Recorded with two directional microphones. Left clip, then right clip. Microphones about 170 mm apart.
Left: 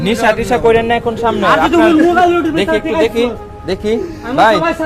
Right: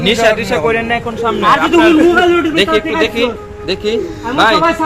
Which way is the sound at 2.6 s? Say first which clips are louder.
Right 1 dB; 65° left (ahead or behind).